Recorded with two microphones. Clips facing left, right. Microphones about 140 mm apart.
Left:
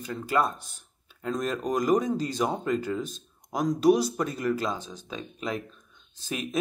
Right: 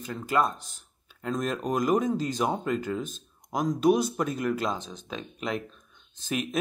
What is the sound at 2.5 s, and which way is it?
Speech, 40° left (ahead or behind).